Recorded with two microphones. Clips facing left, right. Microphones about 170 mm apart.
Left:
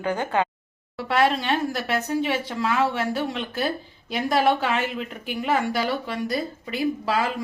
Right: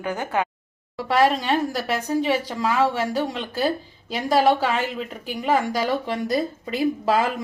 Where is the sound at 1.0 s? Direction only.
40° right (ahead or behind).